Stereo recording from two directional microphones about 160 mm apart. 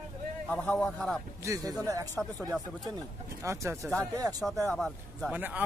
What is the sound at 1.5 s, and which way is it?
Speech, 20° right (ahead or behind).